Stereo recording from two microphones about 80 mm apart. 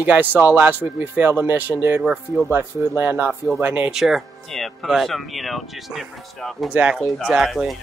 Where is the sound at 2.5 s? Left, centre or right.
Right.